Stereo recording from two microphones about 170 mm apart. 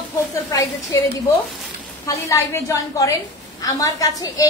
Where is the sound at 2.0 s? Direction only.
15° left (ahead or behind).